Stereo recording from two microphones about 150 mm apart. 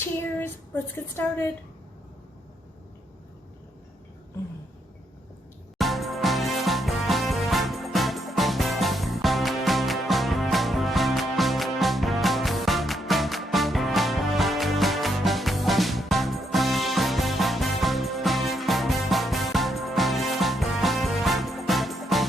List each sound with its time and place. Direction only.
0.0 s child singing: 15° left (ahead or behind)
0.9 s a woman's voice: 15° left (ahead or behind)
5.7 s music: centre (ahead or behind)